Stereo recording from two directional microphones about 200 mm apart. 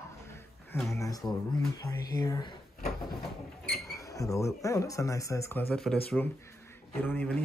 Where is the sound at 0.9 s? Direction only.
15° left (ahead or behind).